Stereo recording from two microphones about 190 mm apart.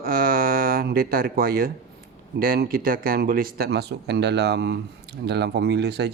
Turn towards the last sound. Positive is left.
turn(degrees=-60)  # may be behind; listen again after turning